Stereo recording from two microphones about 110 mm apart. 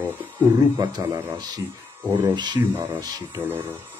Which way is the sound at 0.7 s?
35° right (ahead or behind).